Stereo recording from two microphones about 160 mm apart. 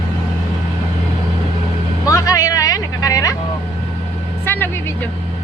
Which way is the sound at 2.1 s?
20° left (ahead or behind).